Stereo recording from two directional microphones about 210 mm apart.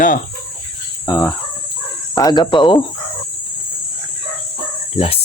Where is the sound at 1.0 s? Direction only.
15° left (ahead or behind).